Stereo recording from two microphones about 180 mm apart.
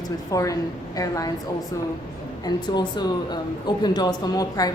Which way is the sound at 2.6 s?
25° left (ahead or behind).